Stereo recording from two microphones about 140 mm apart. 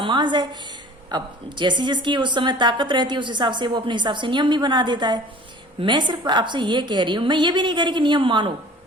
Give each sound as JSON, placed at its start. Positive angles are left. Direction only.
{"t": 0.0, "sound": "a woman's voice", "side_deg": -35}